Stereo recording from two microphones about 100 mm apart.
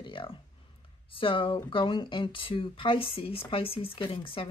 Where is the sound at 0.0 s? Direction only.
60° left (ahead or behind).